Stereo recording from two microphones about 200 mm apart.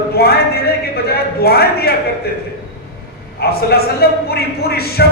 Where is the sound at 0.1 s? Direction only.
50° left (ahead or behind).